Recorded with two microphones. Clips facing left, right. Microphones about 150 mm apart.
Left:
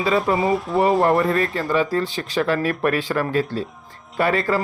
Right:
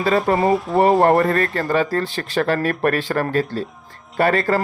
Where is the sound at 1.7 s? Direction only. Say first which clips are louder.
Even; 45° right (ahead or behind).